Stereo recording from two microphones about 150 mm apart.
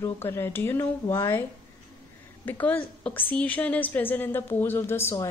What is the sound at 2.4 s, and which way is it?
A woman's voice, 10° left (ahead or behind).